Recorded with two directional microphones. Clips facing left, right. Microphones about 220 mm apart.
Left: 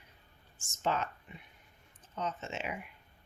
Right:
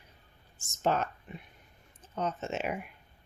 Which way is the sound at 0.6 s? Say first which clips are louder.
Right 4 dB; 45° right (ahead or behind).